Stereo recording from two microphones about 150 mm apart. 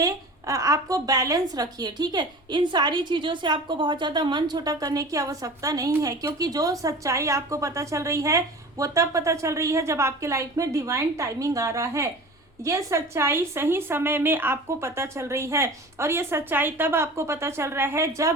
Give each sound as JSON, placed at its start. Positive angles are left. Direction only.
{"t": 0.0, "sound": "a woman's voice", "side_deg": -20}